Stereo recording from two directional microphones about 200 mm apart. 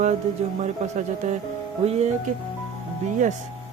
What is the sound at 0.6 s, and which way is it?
Speech, 35° right (ahead or behind).